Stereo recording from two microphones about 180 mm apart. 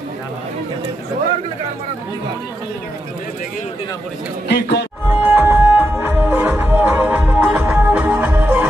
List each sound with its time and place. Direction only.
4.5 s a man's voice: 70° left (ahead or behind)
5.1 s music: 10° right (ahead or behind)